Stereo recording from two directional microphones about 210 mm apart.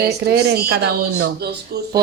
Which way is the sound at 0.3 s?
50° right (ahead or behind).